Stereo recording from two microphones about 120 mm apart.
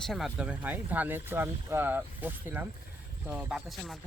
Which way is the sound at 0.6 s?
15° right (ahead or behind).